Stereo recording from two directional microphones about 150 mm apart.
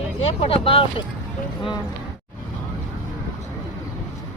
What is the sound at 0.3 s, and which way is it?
Speech, 40° left (ahead or behind).